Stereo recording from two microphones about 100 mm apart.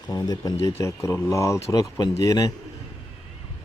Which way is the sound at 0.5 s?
30° left (ahead or behind).